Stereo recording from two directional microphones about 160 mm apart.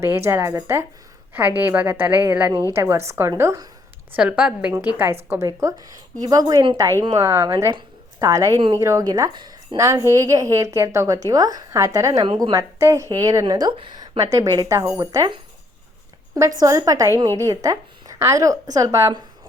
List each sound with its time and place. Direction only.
0.0 s a woman's voice: 15° right (ahead or behind)